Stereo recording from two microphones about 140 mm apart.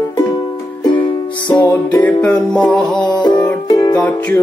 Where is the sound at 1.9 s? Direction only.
10° left (ahead or behind).